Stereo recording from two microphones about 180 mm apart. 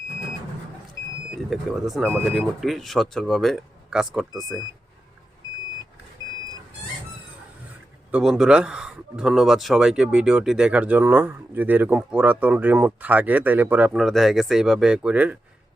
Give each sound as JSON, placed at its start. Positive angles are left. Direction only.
{"t": 1.5, "sound": "speech", "side_deg": 0}
{"t": 6.2, "sound": "vehicle", "side_deg": -20}
{"t": 8.1, "sound": "speech", "side_deg": -5}